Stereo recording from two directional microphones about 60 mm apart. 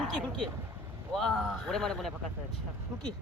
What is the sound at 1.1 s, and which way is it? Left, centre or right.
Speech, centre.